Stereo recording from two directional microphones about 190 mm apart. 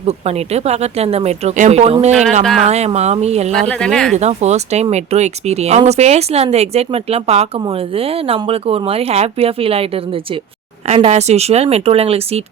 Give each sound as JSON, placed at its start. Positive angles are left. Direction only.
{"t": 0.0, "sound": "speech", "side_deg": -35}
{"t": 2.4, "sound": "speech", "side_deg": 0}
{"t": 2.6, "sound": "speech", "side_deg": -35}
{"t": 3.5, "sound": "speech", "side_deg": 5}
{"t": 4.1, "sound": "speech", "side_deg": -35}